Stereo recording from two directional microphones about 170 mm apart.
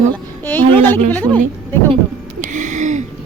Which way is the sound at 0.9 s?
10° left (ahead or behind).